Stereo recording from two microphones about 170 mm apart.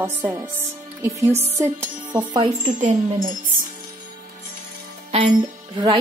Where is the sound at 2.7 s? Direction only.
50° right (ahead or behind).